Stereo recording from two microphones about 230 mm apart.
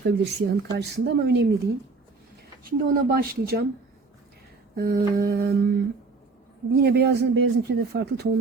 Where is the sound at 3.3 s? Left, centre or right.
Right.